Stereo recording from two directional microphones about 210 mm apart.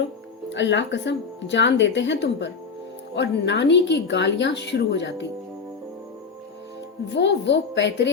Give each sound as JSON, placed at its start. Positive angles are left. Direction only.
{"t": 0.5, "sound": "speech", "side_deg": 60}
{"t": 7.1, "sound": "speech", "side_deg": 55}